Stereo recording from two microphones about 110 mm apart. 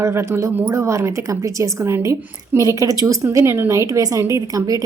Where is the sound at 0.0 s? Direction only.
25° right (ahead or behind).